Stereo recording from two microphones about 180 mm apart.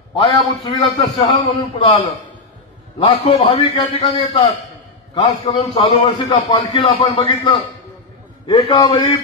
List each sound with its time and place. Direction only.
0.1 s a man's voice: 30° left (ahead or behind)
3.1 s a man's voice: 35° left (ahead or behind)